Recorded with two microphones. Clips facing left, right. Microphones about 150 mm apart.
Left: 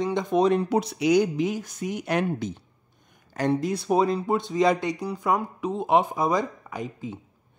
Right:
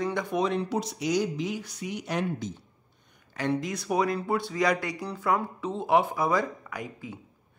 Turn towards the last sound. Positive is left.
turn(degrees=20)  # may be behind; listen again after turning